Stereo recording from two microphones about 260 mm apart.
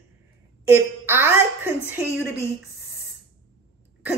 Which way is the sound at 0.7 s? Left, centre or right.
Centre.